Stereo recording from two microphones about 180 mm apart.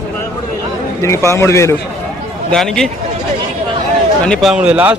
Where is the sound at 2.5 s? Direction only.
Centre (ahead or behind).